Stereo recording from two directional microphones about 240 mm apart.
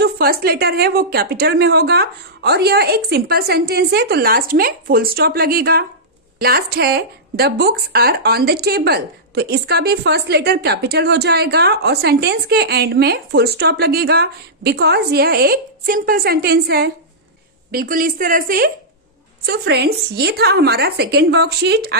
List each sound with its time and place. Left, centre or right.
0.0 s a woman's voice: right